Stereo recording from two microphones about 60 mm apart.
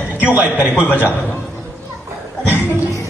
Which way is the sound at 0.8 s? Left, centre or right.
Left.